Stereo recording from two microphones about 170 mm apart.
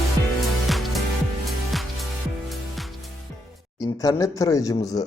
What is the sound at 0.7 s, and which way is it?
Music, centre (ahead or behind).